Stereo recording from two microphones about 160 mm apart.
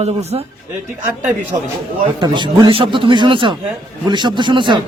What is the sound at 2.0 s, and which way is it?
A man's voice, 30° right (ahead or behind).